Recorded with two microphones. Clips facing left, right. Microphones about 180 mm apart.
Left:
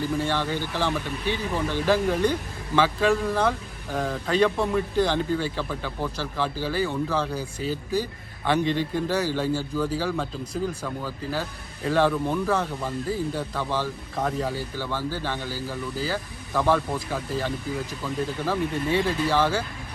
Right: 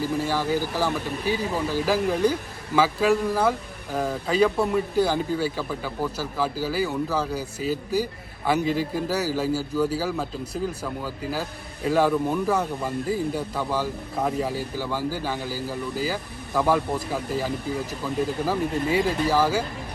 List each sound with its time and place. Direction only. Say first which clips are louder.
0.3 s speech: right 2 dB; 5° right (ahead or behind)